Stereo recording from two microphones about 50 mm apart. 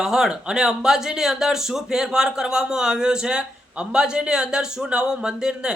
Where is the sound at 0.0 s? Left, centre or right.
Centre.